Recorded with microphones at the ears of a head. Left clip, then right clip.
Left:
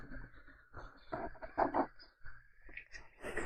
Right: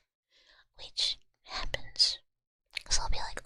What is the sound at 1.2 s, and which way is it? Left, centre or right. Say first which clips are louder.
Whispering: left 5 dB; left.